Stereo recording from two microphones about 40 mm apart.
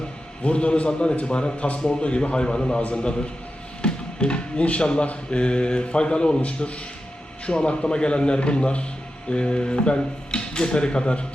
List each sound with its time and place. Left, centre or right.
0.4 s speech: left
3.8 s music: left
4.6 s a man's voice: left